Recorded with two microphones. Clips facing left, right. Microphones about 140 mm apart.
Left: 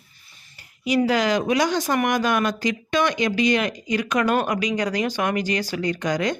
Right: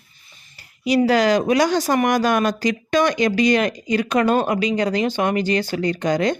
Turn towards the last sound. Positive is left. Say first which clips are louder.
# right 4 dB
turn(degrees=-30)  # may be behind; listen again after turning